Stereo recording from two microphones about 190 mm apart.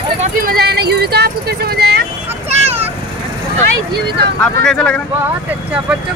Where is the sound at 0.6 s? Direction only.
55° right (ahead or behind).